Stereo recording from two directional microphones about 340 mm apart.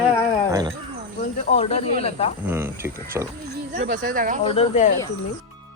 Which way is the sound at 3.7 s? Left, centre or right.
Right.